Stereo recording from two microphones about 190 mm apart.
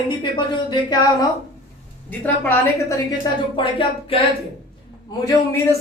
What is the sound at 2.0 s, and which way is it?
Speech, 10° left (ahead or behind).